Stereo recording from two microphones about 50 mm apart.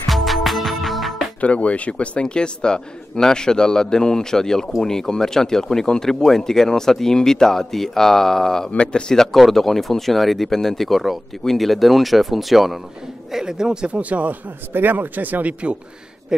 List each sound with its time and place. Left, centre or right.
0.1 s music: centre
1.4 s a man's voice: left; by 8.7 s centre
8.7 s speech: centre
9.2 s speech: centre; by 14.3 s right
14.7 s speech: right